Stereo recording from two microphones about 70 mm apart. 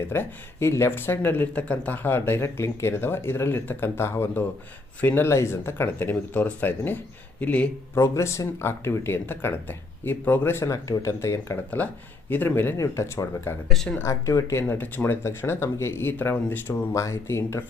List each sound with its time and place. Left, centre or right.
0.1 s speech: left
4.9 s speech: left
5.2 s speech: left
7.9 s speech: left
12.3 s speech: left
12.7 s speech: left
13.7 s speech: centre
14.0 s speech: left
14.7 s speech: left
16.9 s speech: left